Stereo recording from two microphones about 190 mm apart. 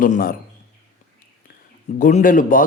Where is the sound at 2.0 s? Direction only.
45° left (ahead or behind).